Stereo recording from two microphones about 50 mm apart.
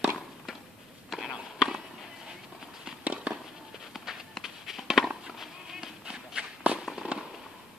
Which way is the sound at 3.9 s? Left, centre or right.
Centre.